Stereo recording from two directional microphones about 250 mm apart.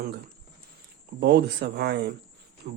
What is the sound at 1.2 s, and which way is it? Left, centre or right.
A man's voice, right.